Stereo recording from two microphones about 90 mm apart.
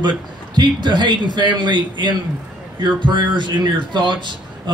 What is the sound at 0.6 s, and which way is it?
Speech, 55° right (ahead or behind).